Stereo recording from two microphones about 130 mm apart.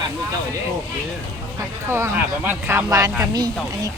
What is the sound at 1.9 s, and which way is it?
Speech, 15° right (ahead or behind).